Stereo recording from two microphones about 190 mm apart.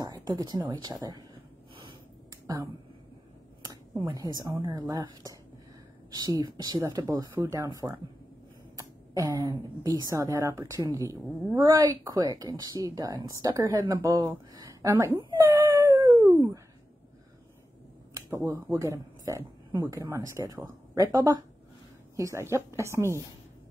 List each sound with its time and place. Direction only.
0.0 s a sound: 20° right (ahead or behind)
0.7 s speech: 20° right (ahead or behind)
2.4 s a woman's voice: 20° right (ahead or behind)
15.6 s dog: 15° right (ahead or behind)
18.1 s a woman's voice: 15° right (ahead or behind)